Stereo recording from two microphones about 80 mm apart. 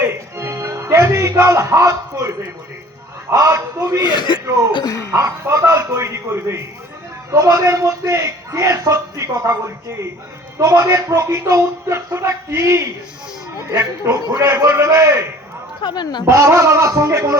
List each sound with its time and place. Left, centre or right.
0.0 s music: right
3.3 s a man's voice: right
4.0 s speech: left
4.7 s speech: left
5.1 s a man's voice: right
10.6 s speech: right
15.8 s speech: left
16.3 s speech: right